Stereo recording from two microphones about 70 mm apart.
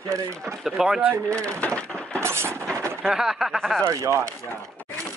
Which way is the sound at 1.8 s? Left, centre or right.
Centre.